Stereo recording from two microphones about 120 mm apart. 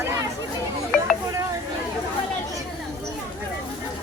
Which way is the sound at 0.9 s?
5° left (ahead or behind).